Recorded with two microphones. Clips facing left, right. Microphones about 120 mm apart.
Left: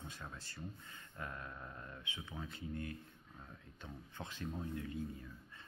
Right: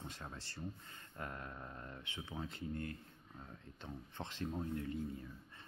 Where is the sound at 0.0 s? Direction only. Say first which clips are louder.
Right 1 dB; 30° right (ahead or behind).